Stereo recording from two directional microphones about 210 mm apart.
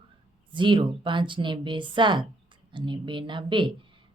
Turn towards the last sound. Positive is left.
turn(degrees=-25)  # may be behind; listen again after turning